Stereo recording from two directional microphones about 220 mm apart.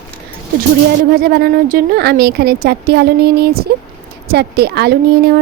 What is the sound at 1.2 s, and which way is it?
A woman's voice, 45° right (ahead or behind).